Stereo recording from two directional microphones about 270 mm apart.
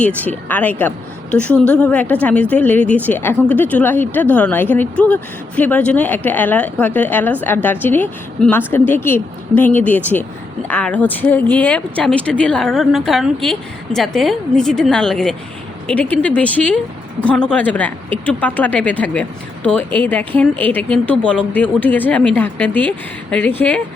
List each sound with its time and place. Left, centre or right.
0.0 s a woman's voice: centre